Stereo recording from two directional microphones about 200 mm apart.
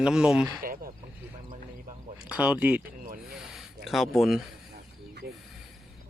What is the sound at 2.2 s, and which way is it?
Speech, 5° right (ahead or behind).